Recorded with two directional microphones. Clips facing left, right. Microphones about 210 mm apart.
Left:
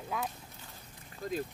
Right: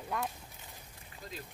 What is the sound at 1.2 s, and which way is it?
Speech, 50° left (ahead or behind).